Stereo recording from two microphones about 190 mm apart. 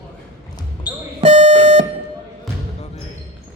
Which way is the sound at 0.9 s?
20° left (ahead or behind).